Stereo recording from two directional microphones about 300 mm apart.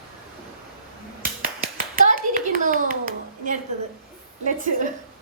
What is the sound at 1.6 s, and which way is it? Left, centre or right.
Clapping, right.